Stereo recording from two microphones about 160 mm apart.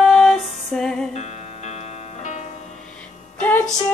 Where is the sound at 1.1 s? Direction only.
45° left (ahead or behind).